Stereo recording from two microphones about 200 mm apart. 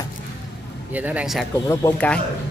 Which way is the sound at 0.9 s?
5° right (ahead or behind).